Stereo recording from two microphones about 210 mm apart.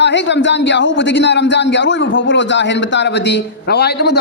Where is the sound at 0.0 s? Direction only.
55° left (ahead or behind).